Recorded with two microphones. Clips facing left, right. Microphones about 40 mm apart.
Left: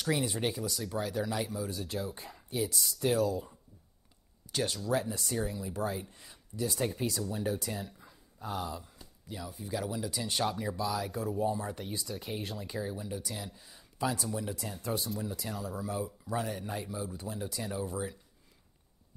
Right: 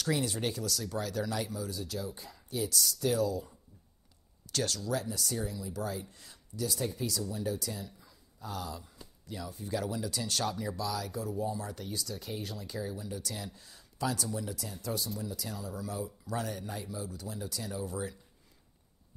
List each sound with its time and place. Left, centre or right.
0.0 s speech: centre
1.9 s speech: left
4.5 s speech: centre
9.2 s speech: centre